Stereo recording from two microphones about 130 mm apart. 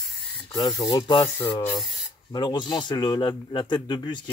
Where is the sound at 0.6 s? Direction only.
30° left (ahead or behind).